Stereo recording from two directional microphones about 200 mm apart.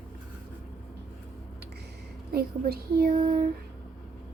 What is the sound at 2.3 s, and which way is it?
Speech, 50° right (ahead or behind).